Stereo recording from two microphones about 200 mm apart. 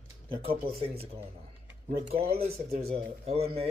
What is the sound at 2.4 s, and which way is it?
Speech, 30° right (ahead or behind).